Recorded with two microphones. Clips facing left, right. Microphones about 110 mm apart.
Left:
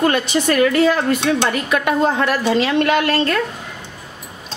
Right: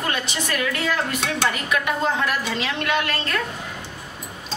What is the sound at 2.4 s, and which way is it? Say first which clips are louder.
Speech: left 9 dB; 40° left (ahead or behind).